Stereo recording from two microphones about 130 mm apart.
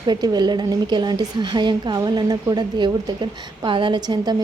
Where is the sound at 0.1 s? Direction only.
30° right (ahead or behind).